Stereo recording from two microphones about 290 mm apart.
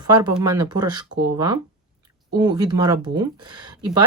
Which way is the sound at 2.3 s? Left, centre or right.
Centre.